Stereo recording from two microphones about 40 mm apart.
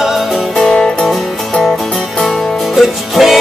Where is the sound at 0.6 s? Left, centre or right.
Left.